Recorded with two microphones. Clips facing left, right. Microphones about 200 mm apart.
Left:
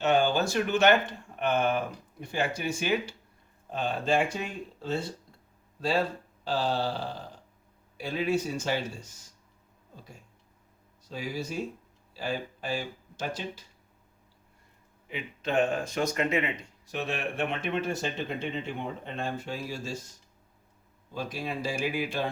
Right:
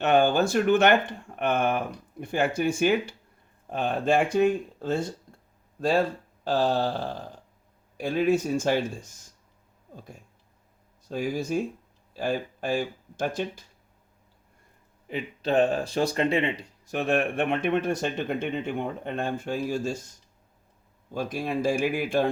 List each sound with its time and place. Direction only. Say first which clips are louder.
0.0 s speech: right 4 dB; 55° right (ahead or behind)
6.4 s speech: right 5 dB; 45° right (ahead or behind)
11.1 s speech: right 7 dB; 45° right (ahead or behind)
15.0 s speech: right 5 dB; 35° right (ahead or behind)
16.8 s speech: right 8 dB; 50° right (ahead or behind)
21.1 s speech: right 5 dB; 50° right (ahead or behind)